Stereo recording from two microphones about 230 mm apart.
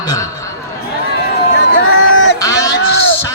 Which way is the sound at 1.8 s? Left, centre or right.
Left.